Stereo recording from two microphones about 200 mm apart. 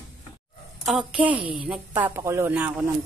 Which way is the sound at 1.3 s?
25° right (ahead or behind).